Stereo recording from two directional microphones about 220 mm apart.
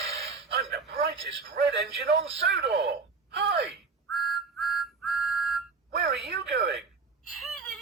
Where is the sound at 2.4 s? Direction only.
50° right (ahead or behind).